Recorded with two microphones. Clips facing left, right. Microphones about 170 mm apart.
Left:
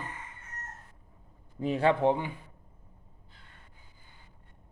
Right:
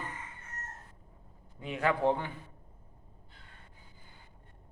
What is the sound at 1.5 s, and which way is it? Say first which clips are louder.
Speech: left 5 dB; 35° left (ahead or behind).